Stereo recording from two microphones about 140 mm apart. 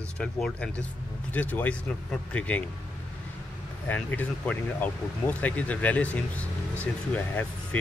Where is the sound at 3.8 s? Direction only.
10° left (ahead or behind).